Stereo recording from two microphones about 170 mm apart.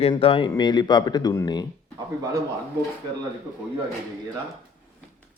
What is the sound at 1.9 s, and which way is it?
Speech, 20° right (ahead or behind).